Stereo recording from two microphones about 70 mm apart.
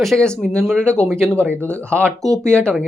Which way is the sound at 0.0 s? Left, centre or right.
Centre.